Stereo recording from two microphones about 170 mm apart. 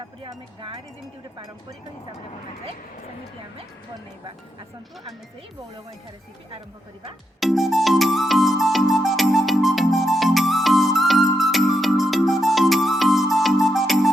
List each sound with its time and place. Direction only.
0.2 s speech: 30° right (ahead or behind)
7.3 s music: centre (ahead or behind)